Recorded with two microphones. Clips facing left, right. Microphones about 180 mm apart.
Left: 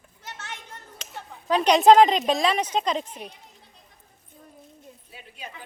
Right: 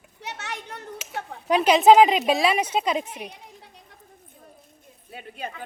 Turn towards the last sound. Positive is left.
turn(degrees=-55)  # may be behind; listen again after turning